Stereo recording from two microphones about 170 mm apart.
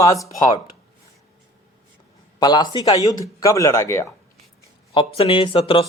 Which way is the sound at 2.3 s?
25° left (ahead or behind).